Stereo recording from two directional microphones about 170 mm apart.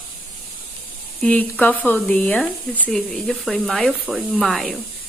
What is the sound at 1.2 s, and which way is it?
Speech, 10° left (ahead or behind).